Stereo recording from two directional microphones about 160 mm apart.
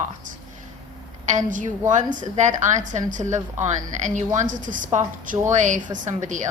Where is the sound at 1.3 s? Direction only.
55° right (ahead or behind).